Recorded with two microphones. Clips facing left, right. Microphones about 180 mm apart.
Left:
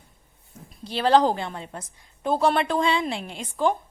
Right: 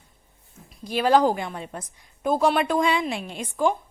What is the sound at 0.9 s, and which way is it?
Speech, 10° right (ahead or behind).